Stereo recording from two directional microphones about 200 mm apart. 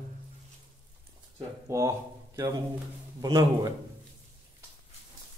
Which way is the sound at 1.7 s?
15° right (ahead or behind).